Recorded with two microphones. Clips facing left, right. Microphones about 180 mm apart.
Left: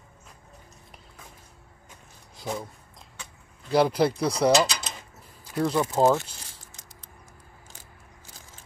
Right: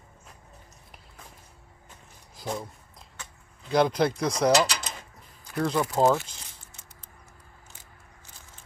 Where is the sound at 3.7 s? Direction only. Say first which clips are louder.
Left 1 dB; 5° left (ahead or behind).